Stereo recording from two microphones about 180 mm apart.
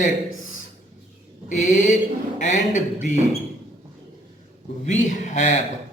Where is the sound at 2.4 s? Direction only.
40° left (ahead or behind).